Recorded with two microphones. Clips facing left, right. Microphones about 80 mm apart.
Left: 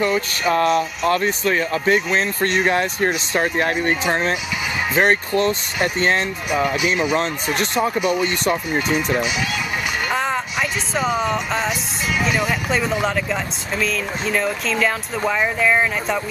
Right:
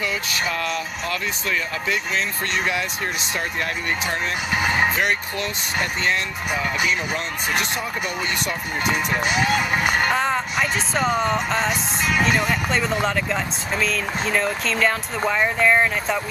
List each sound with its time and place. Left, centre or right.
0.0 s speech: left
4.6 s vehicle: right
4.9 s speech: left
6.5 s speech: left
7.2 s speech: left
8.7 s speech: right
10.1 s speech: centre